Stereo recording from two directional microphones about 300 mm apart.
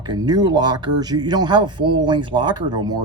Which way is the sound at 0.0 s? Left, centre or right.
Centre.